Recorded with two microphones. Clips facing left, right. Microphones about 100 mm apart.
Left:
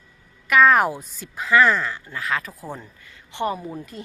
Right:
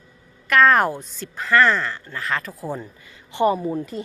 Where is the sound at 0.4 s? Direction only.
5° left (ahead or behind).